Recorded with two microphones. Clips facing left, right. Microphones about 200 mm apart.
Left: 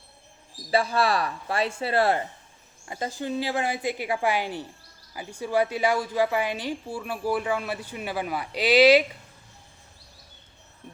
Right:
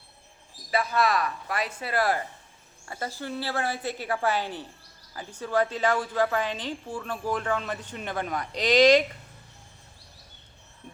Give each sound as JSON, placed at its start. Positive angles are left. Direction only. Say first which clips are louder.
{"t": 0.7, "sound": "a man's voice", "louder": "left 2 dB", "side_deg": 30}